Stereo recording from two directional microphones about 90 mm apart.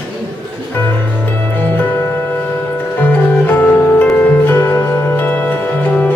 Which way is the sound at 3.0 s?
20° left (ahead or behind).